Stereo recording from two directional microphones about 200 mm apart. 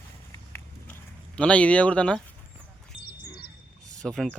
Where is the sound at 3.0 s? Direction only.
50° left (ahead or behind).